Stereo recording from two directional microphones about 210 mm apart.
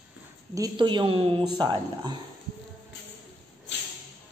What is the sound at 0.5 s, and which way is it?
A woman's voice, 20° right (ahead or behind).